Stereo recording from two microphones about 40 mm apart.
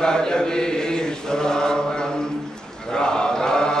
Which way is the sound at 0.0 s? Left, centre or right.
Centre.